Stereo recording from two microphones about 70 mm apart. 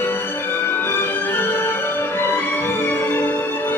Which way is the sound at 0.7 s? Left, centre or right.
Left.